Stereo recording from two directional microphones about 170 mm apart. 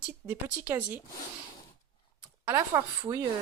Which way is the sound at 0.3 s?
10° right (ahead or behind).